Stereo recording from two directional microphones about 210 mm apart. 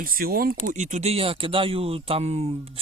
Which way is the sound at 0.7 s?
35° right (ahead or behind).